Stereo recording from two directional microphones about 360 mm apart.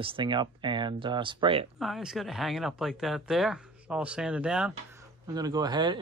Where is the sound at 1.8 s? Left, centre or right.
Centre.